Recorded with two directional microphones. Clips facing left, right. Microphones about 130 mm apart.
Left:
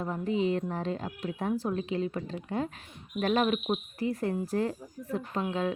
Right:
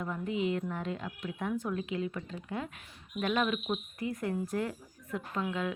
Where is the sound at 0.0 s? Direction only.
35° left (ahead or behind).